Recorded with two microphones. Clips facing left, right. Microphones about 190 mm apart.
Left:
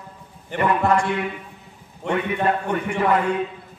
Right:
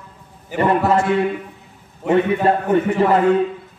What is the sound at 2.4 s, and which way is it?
Speech, 30° right (ahead or behind).